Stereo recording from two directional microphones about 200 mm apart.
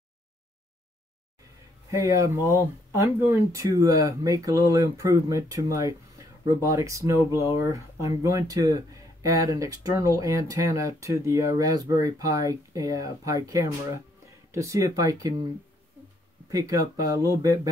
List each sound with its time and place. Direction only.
1.9 s speech: 15° right (ahead or behind)
3.3 s speech: 15° right (ahead or behind)
16.4 s speech: 15° right (ahead or behind)